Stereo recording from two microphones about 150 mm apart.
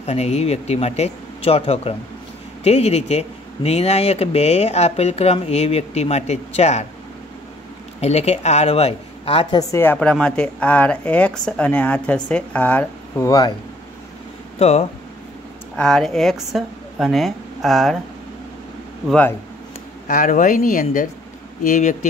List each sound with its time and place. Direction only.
0.0 s speech: 45° left (ahead or behind)
8.0 s speech: 45° left (ahead or behind)
9.6 s speech: 20° left (ahead or behind)
14.6 s speech: 45° left (ahead or behind)
15.7 s a woman's voice: 5° left (ahead or behind)
19.0 s speech: 10° left (ahead or behind)
20.1 s speech: 60° left (ahead or behind)
21.6 s speech: 55° left (ahead or behind)